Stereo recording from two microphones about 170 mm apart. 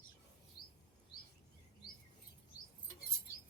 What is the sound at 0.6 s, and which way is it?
Chirp, 60° left (ahead or behind).